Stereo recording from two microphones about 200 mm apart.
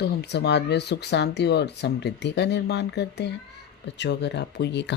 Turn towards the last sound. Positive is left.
turn(degrees=60)  # may be behind; listen again after turning